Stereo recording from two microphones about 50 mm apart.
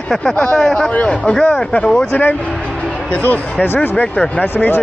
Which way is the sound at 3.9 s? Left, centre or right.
Left.